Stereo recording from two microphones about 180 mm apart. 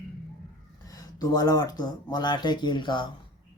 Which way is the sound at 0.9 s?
20° left (ahead or behind).